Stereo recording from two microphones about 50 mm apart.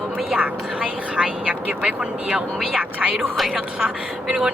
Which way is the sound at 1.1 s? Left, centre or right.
Centre.